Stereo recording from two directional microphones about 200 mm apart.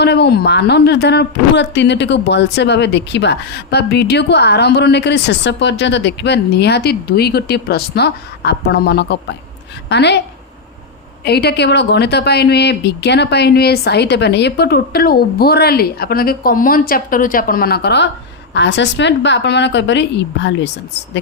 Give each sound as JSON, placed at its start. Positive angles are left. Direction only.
{"t": 0.0, "sound": "a woman's voice", "side_deg": 55}
{"t": 11.3, "sound": "a woman's voice", "side_deg": 55}